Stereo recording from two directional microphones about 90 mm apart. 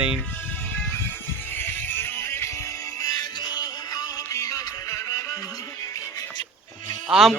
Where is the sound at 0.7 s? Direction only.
20° left (ahead or behind); by 6.4 s 40° left (ahead or behind).